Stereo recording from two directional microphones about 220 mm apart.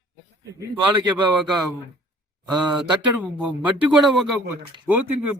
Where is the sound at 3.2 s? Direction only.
5° right (ahead or behind).